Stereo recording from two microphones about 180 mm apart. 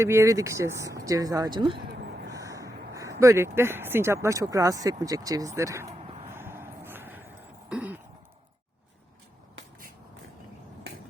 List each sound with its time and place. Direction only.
0.0 s speech: 15° right (ahead or behind)
2.3 s a sound: 20° right (ahead or behind)
7.7 s throat clearing: 10° right (ahead or behind)